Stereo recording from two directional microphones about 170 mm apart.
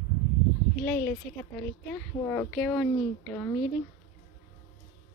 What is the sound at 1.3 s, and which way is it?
Speech, 5° left (ahead or behind).